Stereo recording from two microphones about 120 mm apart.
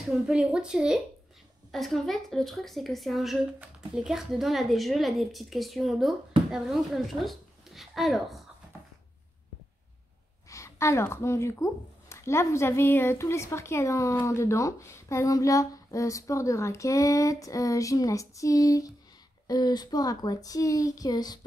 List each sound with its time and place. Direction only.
0.0 s a woman's voice: 5° right (ahead or behind)
10.5 s speech: 25° left (ahead or behind)